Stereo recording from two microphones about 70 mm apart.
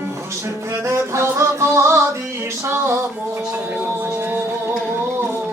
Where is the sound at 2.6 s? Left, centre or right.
Right.